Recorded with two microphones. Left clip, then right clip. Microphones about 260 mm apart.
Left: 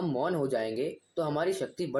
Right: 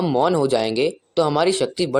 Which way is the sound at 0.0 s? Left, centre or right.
Right.